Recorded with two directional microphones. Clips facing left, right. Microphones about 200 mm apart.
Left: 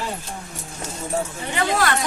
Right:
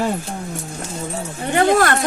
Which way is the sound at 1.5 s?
50° right (ahead or behind).